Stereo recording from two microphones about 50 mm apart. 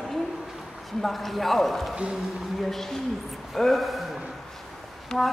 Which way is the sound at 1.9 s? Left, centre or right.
Centre.